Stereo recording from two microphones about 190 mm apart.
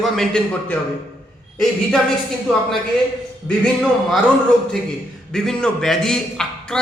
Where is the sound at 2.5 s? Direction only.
5° left (ahead or behind).